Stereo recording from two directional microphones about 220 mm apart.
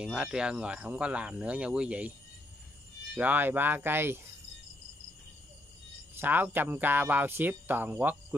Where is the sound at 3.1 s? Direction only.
10° right (ahead or behind).